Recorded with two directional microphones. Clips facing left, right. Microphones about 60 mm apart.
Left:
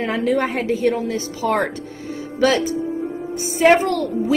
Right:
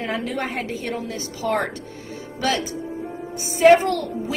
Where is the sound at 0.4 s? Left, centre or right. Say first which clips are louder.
Left 7 dB; left.